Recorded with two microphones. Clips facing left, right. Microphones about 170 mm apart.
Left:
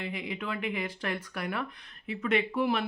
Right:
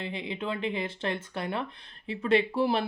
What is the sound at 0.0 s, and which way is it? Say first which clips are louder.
Speech: right 2 dB; 25° right (ahead or behind).